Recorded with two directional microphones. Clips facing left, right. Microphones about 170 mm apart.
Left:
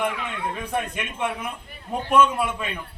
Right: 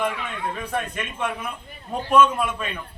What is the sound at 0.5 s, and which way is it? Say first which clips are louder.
A man's voice: left 1 dB; 15° left (ahead or behind).